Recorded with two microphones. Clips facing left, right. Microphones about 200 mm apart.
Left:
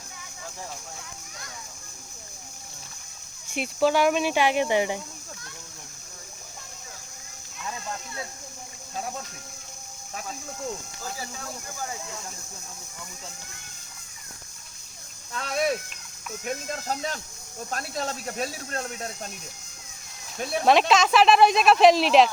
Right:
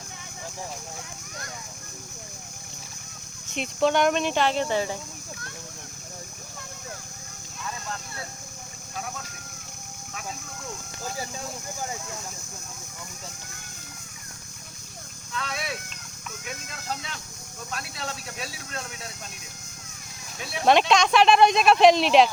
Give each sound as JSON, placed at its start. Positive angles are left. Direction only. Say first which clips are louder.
{"t": 3.5, "sound": "speech", "louder": "even", "side_deg": 5}
{"t": 15.3, "sound": "speech", "louder": "left 7 dB", "side_deg": 45}
{"t": 20.7, "sound": "speech", "louder": "even", "side_deg": 0}